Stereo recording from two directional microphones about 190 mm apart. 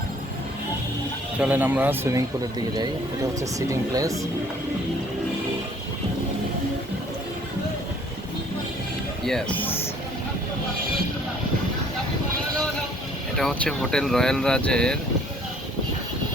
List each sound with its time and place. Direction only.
1.4 s speech: 10° right (ahead or behind)
3.4 s speech: 15° right (ahead or behind)
9.2 s speech: 5° left (ahead or behind)
13.3 s speech: 5° left (ahead or behind)